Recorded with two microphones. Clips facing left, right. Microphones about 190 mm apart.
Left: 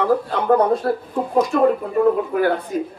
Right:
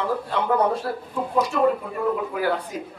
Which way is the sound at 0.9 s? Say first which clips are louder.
Left 8 dB; 45° left (ahead or behind).